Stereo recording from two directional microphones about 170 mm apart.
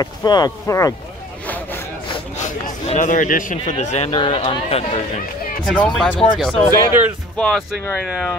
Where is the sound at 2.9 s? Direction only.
45° left (ahead or behind).